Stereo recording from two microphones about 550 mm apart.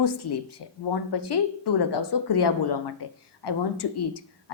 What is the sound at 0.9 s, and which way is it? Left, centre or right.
A woman's voice, left.